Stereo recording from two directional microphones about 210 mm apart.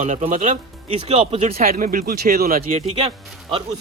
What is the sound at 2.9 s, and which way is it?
Speech, 30° right (ahead or behind).